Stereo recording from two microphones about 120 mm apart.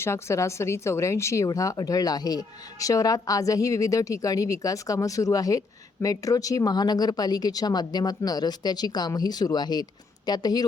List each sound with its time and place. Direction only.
0.0 s speech: 25° left (ahead or behind)